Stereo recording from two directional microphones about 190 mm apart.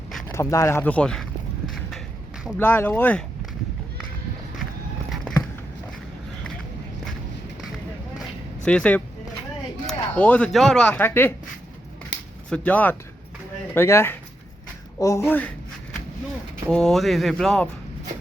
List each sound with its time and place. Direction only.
0.3 s speech: 15° left (ahead or behind)
2.6 s speech: 10° left (ahead or behind)
8.6 s speech: 5° left (ahead or behind)
12.1 s a sound: 65° left (ahead or behind)
12.5 s speech: 5° left (ahead or behind)
16.6 s speech: centre (ahead or behind)